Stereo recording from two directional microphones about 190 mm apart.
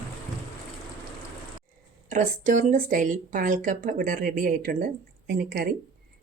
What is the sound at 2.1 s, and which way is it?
Speech, 40° right (ahead or behind).